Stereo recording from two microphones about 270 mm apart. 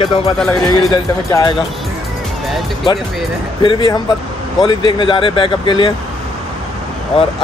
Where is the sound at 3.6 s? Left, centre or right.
Centre.